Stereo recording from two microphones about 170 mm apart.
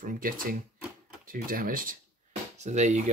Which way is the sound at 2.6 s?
45° right (ahead or behind).